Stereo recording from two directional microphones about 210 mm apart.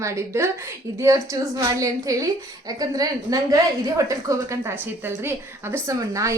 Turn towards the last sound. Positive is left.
turn(degrees=-15)  # may be behind; listen again after turning